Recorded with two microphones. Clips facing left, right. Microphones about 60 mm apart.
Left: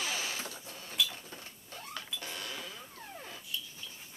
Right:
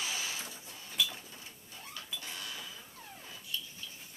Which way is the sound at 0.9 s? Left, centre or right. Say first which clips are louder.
Left 1 dB; centre.